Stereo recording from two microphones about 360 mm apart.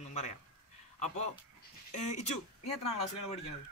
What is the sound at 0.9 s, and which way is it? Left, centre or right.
A man's voice, centre.